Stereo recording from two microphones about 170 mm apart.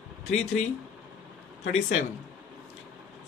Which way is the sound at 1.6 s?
45° left (ahead or behind).